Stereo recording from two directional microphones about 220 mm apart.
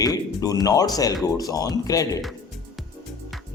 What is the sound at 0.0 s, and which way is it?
Speech, 15° left (ahead or behind).